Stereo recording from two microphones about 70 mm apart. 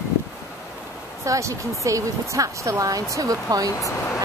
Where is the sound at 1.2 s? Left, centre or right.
Right.